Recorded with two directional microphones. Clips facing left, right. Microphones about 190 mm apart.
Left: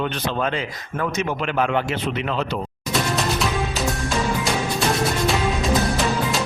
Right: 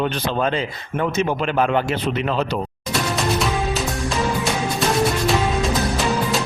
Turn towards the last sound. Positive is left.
turn(degrees=0)  # may be behind; listen again after turning